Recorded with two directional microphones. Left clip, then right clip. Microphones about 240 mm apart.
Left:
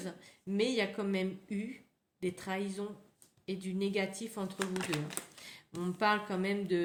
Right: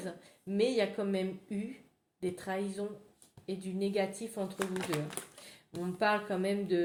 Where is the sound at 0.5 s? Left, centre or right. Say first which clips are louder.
Right 2 dB; left.